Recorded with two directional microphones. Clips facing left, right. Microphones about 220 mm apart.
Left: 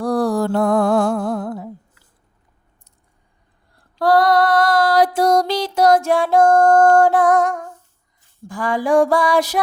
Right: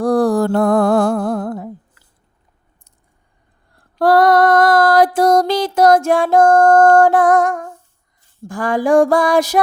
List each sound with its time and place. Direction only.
0.0 s music: 50° right (ahead or behind)
3.9 s female singing: 50° right (ahead or behind)
8.4 s music: 50° right (ahead or behind)